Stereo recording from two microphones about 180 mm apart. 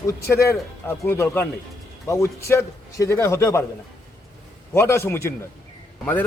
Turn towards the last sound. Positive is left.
turn(degrees=10)  # may be behind; listen again after turning